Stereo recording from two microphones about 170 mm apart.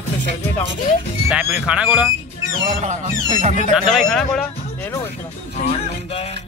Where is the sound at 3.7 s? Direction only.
Centre (ahead or behind).